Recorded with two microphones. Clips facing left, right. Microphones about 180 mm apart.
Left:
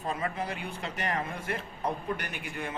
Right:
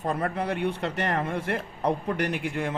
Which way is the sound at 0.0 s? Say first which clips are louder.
Right 5 dB; 60° right (ahead or behind).